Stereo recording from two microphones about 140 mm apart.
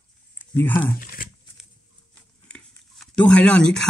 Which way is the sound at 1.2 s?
90° left.